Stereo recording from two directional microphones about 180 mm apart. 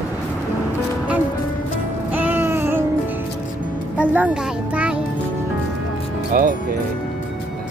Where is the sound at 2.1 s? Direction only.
10° right (ahead or behind).